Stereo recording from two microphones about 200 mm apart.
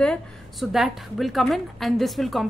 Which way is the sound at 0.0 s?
Centre (ahead or behind).